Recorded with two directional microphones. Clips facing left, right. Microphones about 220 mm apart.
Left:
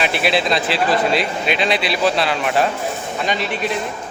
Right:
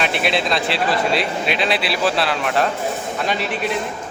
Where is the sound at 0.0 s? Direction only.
Centre (ahead or behind).